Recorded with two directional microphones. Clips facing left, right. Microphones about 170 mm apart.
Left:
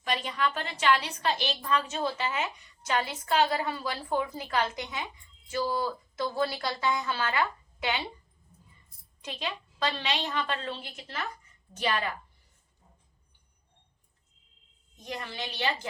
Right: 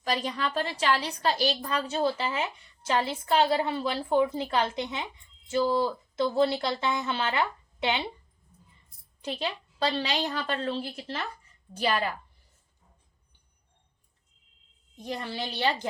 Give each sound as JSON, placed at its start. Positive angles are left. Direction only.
{"t": 0.0, "sound": "a woman's voice", "side_deg": -35}
{"t": 9.2, "sound": "a woman's voice", "side_deg": -30}
{"t": 14.9, "sound": "a woman's voice", "side_deg": -30}